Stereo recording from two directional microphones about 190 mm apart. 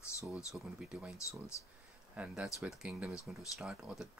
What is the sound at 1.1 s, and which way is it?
Speech, 15° left (ahead or behind).